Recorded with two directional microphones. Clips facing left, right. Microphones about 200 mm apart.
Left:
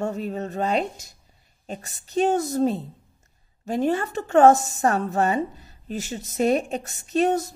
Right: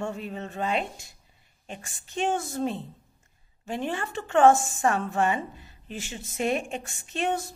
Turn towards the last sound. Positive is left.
turn(degrees=40)  # may be behind; listen again after turning